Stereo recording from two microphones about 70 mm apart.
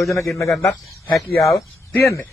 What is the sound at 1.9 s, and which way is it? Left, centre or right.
Speech, left.